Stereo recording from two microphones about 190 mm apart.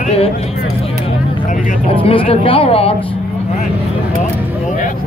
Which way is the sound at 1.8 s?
30° left (ahead or behind).